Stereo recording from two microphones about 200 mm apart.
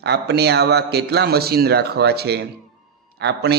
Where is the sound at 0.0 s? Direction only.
55° right (ahead or behind).